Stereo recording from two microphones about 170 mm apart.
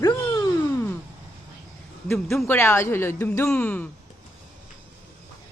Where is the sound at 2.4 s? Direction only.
15° left (ahead or behind).